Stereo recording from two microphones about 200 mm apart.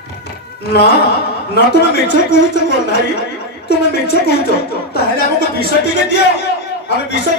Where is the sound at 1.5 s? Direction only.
55° left (ahead or behind).